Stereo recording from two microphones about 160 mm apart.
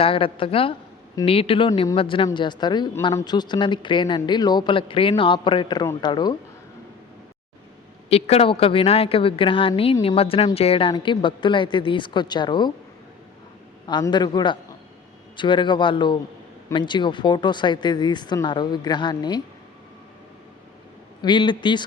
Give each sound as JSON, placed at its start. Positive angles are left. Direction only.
{"t": 0.0, "sound": "a woman's voice", "side_deg": 35}
{"t": 8.1, "sound": "a woman's voice", "side_deg": 40}
{"t": 13.8, "sound": "a woman's voice", "side_deg": 25}
{"t": 21.2, "sound": "a woman's voice", "side_deg": 30}